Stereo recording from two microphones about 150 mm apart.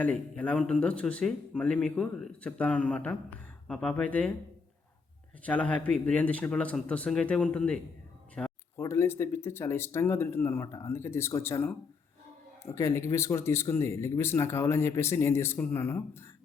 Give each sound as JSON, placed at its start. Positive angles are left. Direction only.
{"t": 0.0, "sound": "speech", "side_deg": 10}
{"t": 5.4, "sound": "speech", "side_deg": 10}
{"t": 8.7, "sound": "speech", "side_deg": 15}